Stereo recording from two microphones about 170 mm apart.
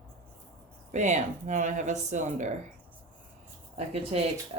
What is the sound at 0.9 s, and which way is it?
Speech, 45° right (ahead or behind).